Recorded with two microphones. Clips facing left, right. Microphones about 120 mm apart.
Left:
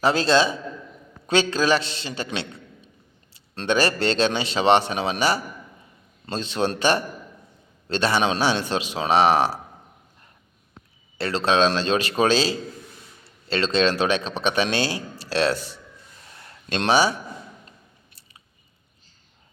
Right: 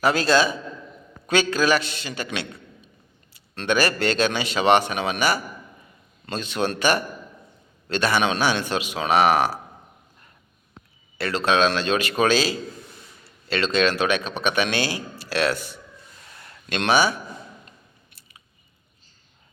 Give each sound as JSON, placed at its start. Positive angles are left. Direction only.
{"t": 0.0, "sound": "speech", "side_deg": 30}
{"t": 11.2, "sound": "speech", "side_deg": 30}